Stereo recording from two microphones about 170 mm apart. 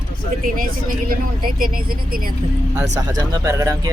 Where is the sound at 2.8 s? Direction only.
20° right (ahead or behind).